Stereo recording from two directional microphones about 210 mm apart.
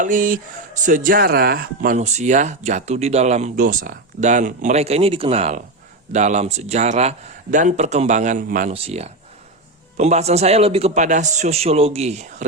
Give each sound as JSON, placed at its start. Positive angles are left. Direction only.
{"t": 0.0, "sound": "speech", "side_deg": -40}
{"t": 8.7, "sound": "speech", "side_deg": -30}